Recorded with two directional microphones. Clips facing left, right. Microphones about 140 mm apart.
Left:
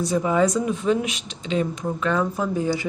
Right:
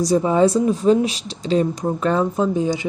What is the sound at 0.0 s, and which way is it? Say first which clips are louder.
Speech: right 4 dB; 30° right (ahead or behind).